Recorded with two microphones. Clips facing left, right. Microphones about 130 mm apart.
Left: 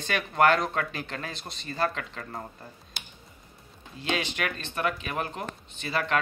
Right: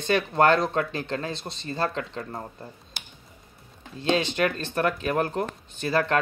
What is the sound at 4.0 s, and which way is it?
Speech, 30° right (ahead or behind).